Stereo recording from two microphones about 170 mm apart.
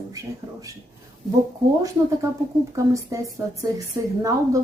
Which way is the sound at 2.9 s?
20° right (ahead or behind).